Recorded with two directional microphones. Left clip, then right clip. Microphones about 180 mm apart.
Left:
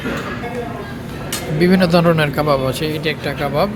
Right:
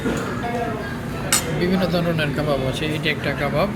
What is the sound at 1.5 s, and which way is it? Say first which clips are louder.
Speech: left 7 dB; 45° left (ahead or behind).